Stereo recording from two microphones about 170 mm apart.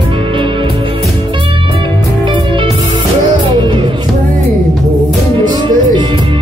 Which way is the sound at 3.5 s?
30° right (ahead or behind).